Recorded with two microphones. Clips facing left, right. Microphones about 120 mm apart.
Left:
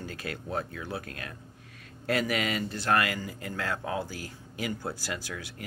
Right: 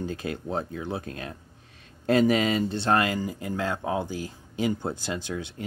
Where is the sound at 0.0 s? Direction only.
20° right (ahead or behind).